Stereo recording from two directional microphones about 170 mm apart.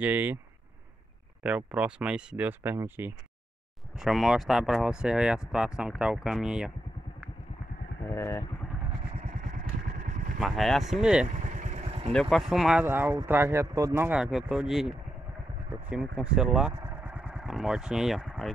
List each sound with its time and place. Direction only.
0.0 s speech: 10° right (ahead or behind)
1.4 s speech: 5° right (ahead or behind)
3.9 s speech: centre (ahead or behind)
8.0 s speech: 15° left (ahead or behind)
9.2 s vehicle: 50° right (ahead or behind)
10.4 s speech: centre (ahead or behind)
11.4 s vehicle: 45° right (ahead or behind)
12.1 s speech: centre (ahead or behind)
16.8 s vehicle: 10° right (ahead or behind)